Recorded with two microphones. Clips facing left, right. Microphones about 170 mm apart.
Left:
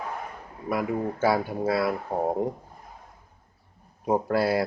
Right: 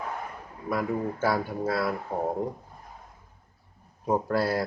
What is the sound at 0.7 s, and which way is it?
Speech, 10° left (ahead or behind).